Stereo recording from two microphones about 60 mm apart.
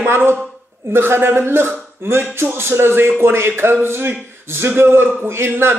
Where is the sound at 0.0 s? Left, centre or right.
Right.